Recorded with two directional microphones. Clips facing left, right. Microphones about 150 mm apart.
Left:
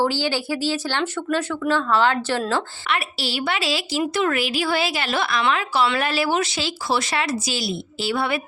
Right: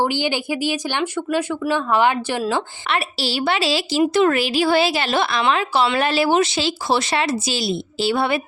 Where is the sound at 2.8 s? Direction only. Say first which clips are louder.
Right 3 dB; 30° right (ahead or behind).